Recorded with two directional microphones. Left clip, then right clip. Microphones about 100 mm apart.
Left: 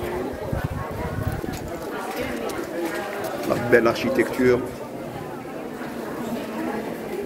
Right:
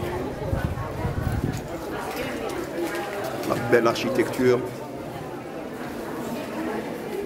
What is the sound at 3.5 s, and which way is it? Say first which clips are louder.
Speech: left 2 dB; 5° right (ahead or behind).